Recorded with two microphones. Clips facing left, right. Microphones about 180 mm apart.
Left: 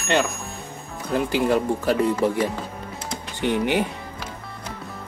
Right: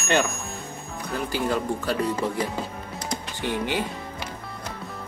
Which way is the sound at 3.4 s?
15° left (ahead or behind).